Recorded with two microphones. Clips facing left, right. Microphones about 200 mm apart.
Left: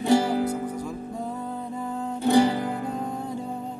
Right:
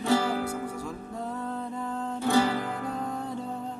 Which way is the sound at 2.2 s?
20° left (ahead or behind).